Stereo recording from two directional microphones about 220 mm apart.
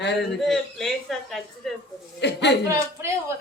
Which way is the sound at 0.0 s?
50° left (ahead or behind).